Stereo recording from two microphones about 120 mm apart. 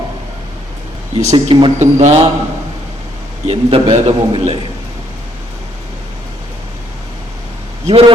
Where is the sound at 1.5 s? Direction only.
45° right (ahead or behind).